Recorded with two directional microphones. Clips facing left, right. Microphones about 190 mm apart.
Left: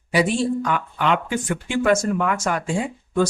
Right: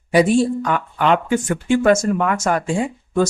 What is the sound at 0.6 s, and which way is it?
Speech, 45° right (ahead or behind).